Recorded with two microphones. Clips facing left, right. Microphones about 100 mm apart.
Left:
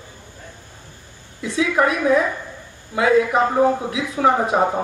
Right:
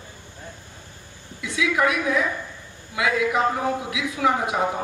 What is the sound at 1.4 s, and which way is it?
A woman's voice, 35° left (ahead or behind).